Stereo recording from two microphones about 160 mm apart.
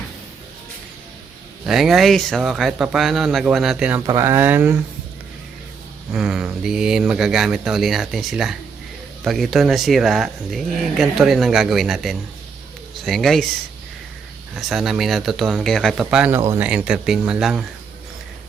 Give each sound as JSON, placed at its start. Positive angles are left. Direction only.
{"t": 1.6, "sound": "speech", "side_deg": 0}
{"t": 4.0, "sound": "speech", "side_deg": -20}
{"t": 6.1, "sound": "speech", "side_deg": -5}
{"t": 14.5, "sound": "speech", "side_deg": 0}
{"t": 16.0, "sound": "speech", "side_deg": -10}